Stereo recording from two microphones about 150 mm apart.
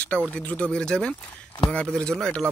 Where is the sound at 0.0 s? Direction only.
10° left (ahead or behind).